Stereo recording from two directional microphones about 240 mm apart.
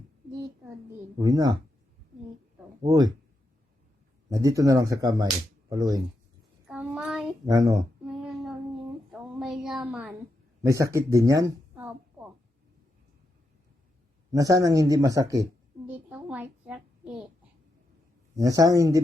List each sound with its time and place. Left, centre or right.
1.2 s speech: centre
2.8 s speech: centre
4.3 s speech: centre
6.7 s child singing: centre
7.5 s speech: centre
8.0 s child singing: centre
9.4 s a woman's voice: centre
10.6 s a sound: centre
14.3 s speech: centre
15.9 s a sound: centre
18.3 s speech: centre